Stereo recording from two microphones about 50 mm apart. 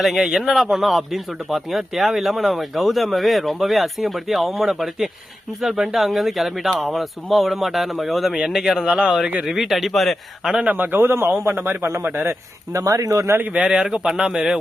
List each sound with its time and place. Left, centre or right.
0.0 s a man's voice: centre
10.7 s a man's voice: right
12.3 s speech: right
13.6 s speech: centre